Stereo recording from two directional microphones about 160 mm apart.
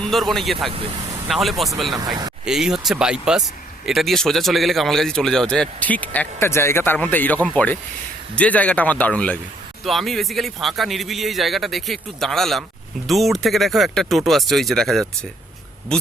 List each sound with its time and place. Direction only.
0.0 s speech: centre (ahead or behind)
0.7 s speech: 35° right (ahead or behind)
1.3 s speech: centre (ahead or behind)